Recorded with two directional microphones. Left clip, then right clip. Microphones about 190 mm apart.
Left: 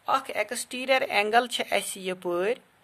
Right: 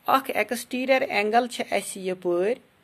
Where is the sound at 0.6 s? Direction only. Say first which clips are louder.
Even; 5° right (ahead or behind).